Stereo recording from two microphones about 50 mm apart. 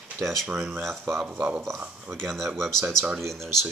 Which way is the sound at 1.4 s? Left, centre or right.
Right.